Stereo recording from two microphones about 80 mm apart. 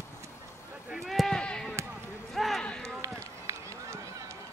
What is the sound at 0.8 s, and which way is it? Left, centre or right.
Basketball bounce, centre.